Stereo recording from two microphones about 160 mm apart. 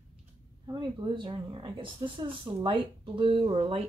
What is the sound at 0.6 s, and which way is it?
Speech, 30° right (ahead or behind).